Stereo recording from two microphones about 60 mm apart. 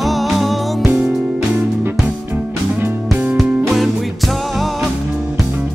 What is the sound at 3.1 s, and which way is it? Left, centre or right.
Music, right.